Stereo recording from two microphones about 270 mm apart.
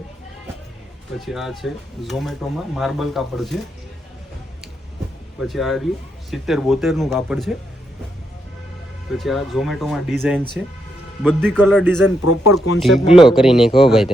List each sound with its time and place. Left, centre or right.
1.2 s speech: centre
5.4 s speech: centre
9.1 s speech: centre
12.2 s speech: left
13.1 s speech: centre